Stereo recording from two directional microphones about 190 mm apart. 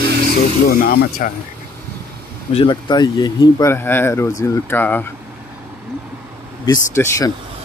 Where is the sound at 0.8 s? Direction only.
45° left (ahead or behind).